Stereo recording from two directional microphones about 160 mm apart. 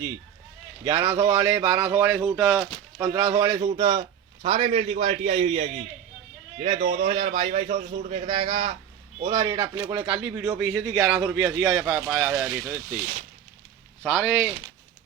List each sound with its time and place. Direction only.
1.0 s speech: 30° right (ahead or behind); by 3.1 s 10° right (ahead or behind)
3.1 s a man's voice: 30° right (ahead or behind); by 13.1 s 10° right (ahead or behind)
14.0 s speech: centre (ahead or behind)